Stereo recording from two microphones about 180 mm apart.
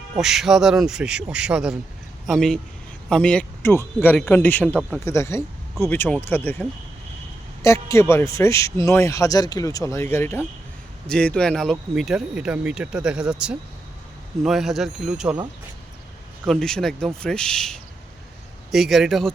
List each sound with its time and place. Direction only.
0.2 s a man's voice: centre (ahead or behind)
4.8 s speech: 5° right (ahead or behind)
5.0 s a man's voice: 15° left (ahead or behind); by 15.4 s 5° right (ahead or behind)
16.5 s speech: 5° left (ahead or behind)